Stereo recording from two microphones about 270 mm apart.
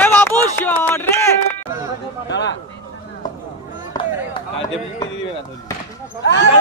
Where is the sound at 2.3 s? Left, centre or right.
Left.